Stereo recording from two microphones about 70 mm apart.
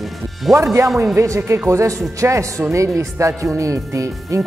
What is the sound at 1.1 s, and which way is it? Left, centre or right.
Speech, right.